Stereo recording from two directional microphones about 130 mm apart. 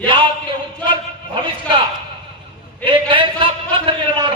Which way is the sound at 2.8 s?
40° right (ahead or behind).